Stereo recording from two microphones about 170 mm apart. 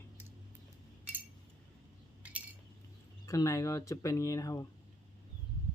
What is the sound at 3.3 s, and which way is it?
Speech, 20° left (ahead or behind).